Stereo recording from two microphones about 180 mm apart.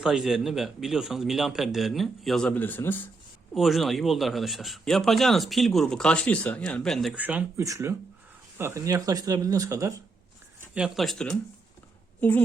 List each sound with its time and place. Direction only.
0.0 s a man's voice: centre (ahead or behind)
3.5 s a man's voice: centre (ahead or behind); by 10.0 s 15° right (ahead or behind)
10.8 s a man's voice: centre (ahead or behind)